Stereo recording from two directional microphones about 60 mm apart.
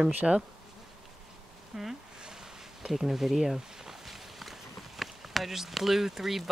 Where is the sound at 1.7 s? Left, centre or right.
Centre.